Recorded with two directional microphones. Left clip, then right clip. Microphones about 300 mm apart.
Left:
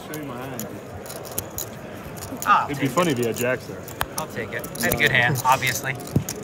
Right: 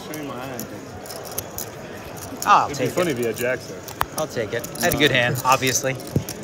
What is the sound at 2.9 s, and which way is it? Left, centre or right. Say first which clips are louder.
Speech: even; left.